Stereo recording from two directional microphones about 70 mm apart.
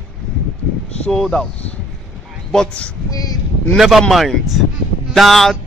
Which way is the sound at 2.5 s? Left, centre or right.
Centre.